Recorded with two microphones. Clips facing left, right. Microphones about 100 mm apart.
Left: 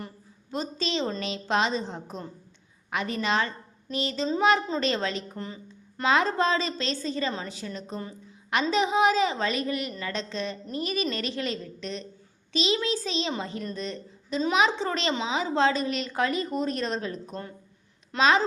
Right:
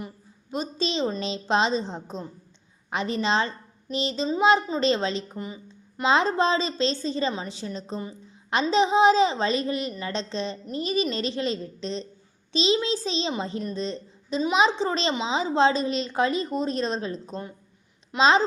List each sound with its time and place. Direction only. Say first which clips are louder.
0.5 s a woman's voice: right 2 dB; 20° right (ahead or behind)